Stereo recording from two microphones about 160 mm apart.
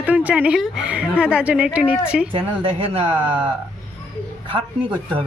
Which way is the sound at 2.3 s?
30° right (ahead or behind).